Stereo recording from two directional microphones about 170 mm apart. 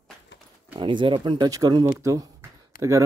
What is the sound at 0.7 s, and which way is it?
Speech, 30° right (ahead or behind).